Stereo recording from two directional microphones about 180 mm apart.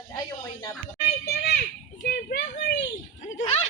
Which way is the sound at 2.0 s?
50° left (ahead or behind).